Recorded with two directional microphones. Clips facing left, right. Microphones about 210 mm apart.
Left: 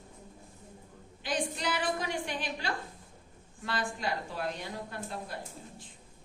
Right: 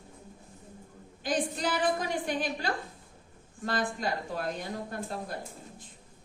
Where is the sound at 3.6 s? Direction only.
45° right (ahead or behind).